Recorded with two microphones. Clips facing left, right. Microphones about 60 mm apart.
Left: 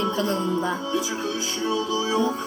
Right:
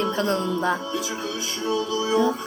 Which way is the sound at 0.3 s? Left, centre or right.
Right.